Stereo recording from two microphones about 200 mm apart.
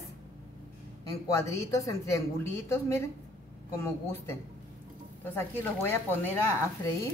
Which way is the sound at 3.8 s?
10° left (ahead or behind).